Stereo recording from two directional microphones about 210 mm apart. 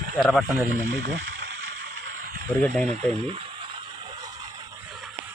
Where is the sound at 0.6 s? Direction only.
50° right (ahead or behind).